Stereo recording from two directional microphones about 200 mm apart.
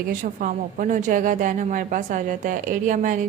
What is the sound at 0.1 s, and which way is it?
A woman's voice, 40° right (ahead or behind).